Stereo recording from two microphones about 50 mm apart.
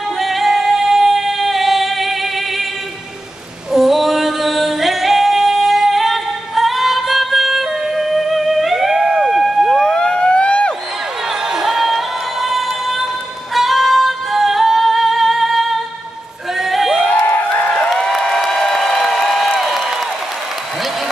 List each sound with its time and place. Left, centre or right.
0.2 s singing: centre
3.7 s singing: centre
9.0 s a sound: centre
9.7 s emergency vehicle: centre
11.4 s music: centre
13.6 s singing: centre
16.5 s a sound: centre
19.6 s applause: centre